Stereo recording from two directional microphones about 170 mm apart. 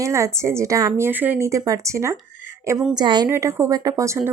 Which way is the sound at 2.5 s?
15° right (ahead or behind).